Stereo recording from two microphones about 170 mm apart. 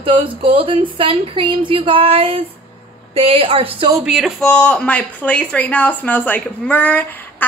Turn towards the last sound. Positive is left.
turn(degrees=10)  # may be behind; listen again after turning